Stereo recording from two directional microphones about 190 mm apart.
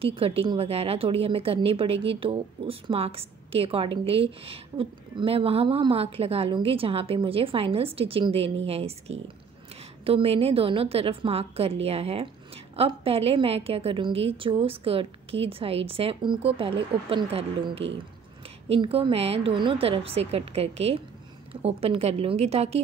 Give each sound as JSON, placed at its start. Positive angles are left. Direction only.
{"t": 0.0, "sound": "a woman's voice", "side_deg": -30}